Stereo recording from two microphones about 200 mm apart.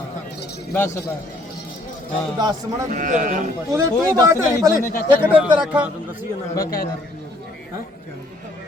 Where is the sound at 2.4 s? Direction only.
20° right (ahead or behind).